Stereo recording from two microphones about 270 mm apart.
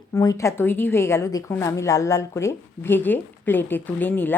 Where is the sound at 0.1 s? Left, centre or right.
Centre.